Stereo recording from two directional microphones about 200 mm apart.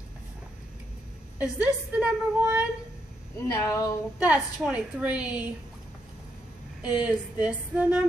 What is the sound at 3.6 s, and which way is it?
Speech, 15° left (ahead or behind).